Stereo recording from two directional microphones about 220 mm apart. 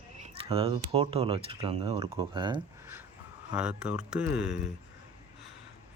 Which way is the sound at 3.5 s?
5° right (ahead or behind).